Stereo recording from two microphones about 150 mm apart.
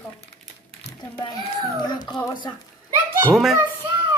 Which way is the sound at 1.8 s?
30° left (ahead or behind).